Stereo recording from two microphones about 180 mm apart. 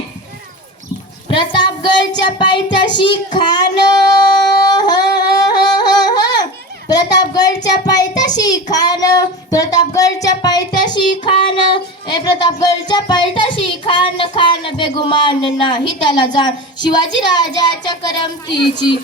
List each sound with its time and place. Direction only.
1.3 s child singing: 25° left (ahead or behind)
2.7 s music: 25° left (ahead or behind)
3.3 s child singing: 25° left (ahead or behind)
5.4 s music: 20° left (ahead or behind)
6.8 s a child's voice: 20° left (ahead or behind)
8.7 s music: 20° left (ahead or behind)